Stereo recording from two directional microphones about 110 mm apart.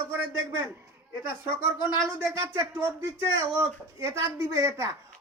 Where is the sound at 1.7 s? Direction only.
45° left (ahead or behind).